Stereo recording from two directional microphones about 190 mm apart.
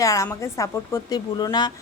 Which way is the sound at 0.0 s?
15° left (ahead or behind).